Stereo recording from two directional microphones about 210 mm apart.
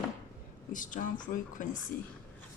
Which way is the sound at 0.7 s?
40° left (ahead or behind).